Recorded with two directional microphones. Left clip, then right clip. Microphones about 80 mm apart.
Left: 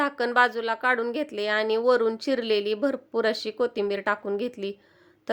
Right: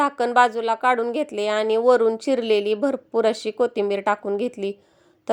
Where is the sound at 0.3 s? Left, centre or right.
Right.